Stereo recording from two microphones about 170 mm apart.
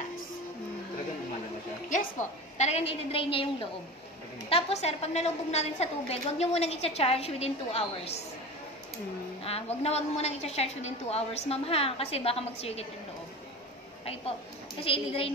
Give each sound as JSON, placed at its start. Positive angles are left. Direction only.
{"t": 1.9, "sound": "a woman's voice", "side_deg": 45}
{"t": 4.5, "sound": "a woman's voice", "side_deg": 35}
{"t": 9.4, "sound": "a woman's voice", "side_deg": 35}
{"t": 14.8, "sound": "a woman's voice", "side_deg": 35}